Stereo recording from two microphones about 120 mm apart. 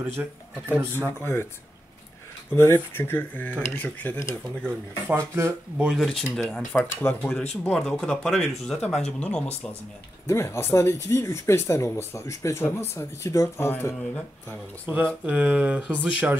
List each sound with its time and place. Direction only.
0.0 s speech: 15° right (ahead or behind)
1.2 s speech: 20° left (ahead or behind)
2.5 s speech: 20° left (ahead or behind)
5.0 s speech: 20° right (ahead or behind)
5.9 s speech: centre (ahead or behind)
6.7 s speech: 15° left (ahead or behind)
7.6 s speech: 5° left (ahead or behind)
10.2 s speech: 20° left (ahead or behind)
14.9 s speech: 15° right (ahead or behind)